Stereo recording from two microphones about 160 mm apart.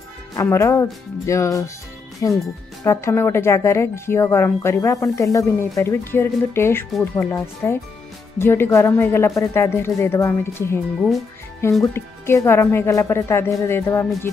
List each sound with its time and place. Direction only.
0.4 s speech: 20° left (ahead or behind)
11.8 s speech: 15° left (ahead or behind)